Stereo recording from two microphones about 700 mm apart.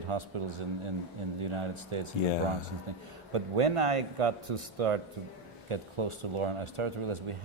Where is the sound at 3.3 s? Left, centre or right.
Right.